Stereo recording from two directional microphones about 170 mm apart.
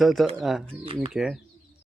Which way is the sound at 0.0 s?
Centre (ahead or behind).